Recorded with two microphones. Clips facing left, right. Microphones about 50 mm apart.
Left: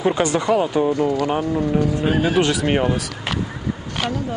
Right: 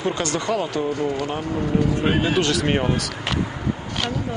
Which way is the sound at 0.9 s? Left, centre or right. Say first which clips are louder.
Left 4 dB; left.